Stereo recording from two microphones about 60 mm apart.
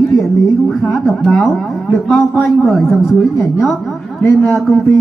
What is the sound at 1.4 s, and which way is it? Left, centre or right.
Speech, left.